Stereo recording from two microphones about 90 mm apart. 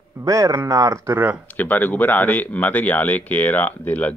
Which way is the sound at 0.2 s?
40° right (ahead or behind).